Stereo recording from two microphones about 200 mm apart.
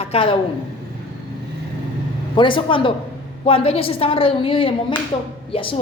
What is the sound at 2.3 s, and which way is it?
A woman's voice, 25° left (ahead or behind).